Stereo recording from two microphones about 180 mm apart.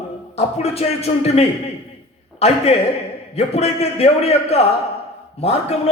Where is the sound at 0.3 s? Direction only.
35° left (ahead or behind).